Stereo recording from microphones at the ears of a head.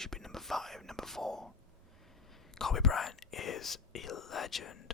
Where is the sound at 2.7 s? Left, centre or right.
Left.